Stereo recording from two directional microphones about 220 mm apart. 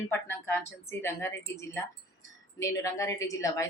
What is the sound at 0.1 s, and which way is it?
Speech, 10° left (ahead or behind).